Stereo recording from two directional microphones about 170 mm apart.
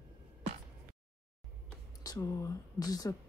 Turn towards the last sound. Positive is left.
turn(degrees=20)  # may be behind; listen again after turning